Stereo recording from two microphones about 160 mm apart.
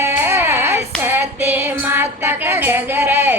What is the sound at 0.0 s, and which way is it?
Child singing, 15° right (ahead or behind).